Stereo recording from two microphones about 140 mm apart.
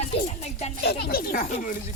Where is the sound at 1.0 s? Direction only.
90° left.